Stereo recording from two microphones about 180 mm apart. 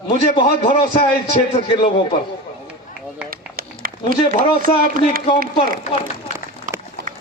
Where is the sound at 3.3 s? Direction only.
55° right (ahead or behind).